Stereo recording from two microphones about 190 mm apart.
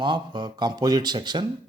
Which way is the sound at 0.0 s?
25° right (ahead or behind).